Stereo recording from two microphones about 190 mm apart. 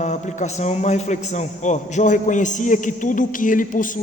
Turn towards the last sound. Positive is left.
turn(degrees=45)  # may be behind; listen again after turning